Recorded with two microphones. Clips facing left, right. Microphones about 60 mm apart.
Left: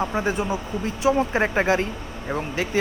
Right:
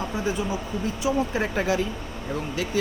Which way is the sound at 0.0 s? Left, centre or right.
Left.